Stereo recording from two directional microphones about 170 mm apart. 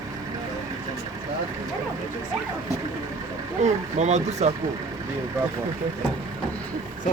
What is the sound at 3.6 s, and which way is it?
Speech, 40° right (ahead or behind).